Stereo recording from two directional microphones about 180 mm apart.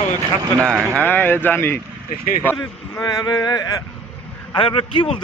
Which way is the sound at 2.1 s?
50° left (ahead or behind).